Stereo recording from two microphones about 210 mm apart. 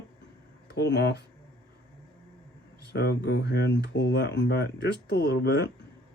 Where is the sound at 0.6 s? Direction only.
55° left (ahead or behind).